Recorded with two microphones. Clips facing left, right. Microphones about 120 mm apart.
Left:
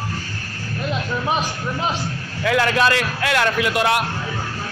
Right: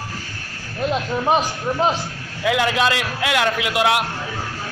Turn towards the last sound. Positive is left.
turn(degrees=-10)  # may be behind; listen again after turning